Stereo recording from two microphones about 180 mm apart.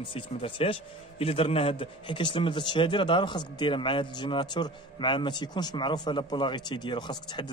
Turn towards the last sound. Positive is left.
turn(degrees=25)  # may be behind; listen again after turning